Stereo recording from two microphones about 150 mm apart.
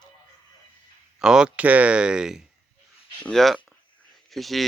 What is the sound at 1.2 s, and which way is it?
Speech, 5° right (ahead or behind).